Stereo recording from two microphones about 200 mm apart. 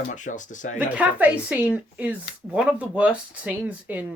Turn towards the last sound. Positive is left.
turn(degrees=-5)  # may be behind; listen again after turning